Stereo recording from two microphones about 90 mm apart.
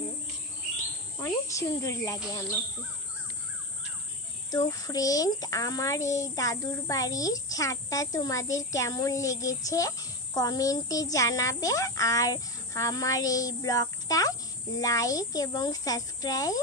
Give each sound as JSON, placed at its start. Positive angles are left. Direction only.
{"t": 1.2, "sound": "speech", "side_deg": 35}
{"t": 4.5, "sound": "a child's voice", "side_deg": 40}